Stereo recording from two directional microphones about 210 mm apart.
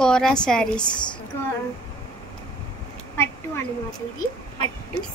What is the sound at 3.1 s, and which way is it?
Speech, 10° left (ahead or behind).